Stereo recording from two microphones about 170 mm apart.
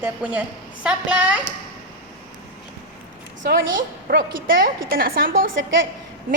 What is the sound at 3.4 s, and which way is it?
A woman's voice, 60° right (ahead or behind).